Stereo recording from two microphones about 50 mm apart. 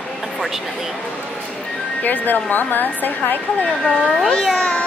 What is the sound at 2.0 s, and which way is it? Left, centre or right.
A woman's voice, left.